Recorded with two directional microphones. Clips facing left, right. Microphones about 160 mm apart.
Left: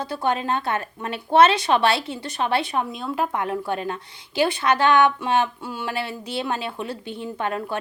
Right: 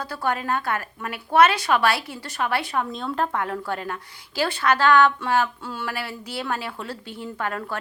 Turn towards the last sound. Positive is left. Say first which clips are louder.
# left 3 dB
turn(degrees=20)  # may be behind; listen again after turning